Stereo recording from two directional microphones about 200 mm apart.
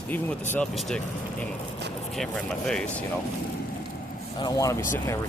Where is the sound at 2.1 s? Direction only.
5° left (ahead or behind).